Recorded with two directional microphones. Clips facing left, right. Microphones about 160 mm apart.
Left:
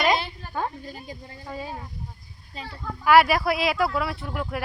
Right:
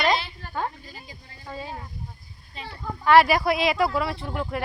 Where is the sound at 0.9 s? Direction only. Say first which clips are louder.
Left 6 dB; 50° left (ahead or behind).